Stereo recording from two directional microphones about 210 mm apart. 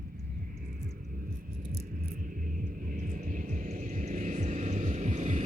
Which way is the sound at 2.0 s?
40° right (ahead or behind).